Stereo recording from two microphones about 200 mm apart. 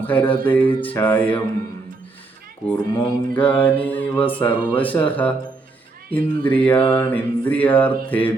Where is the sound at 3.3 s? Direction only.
10° left (ahead or behind).